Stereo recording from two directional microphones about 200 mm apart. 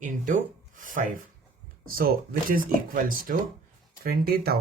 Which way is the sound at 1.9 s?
45° right (ahead or behind).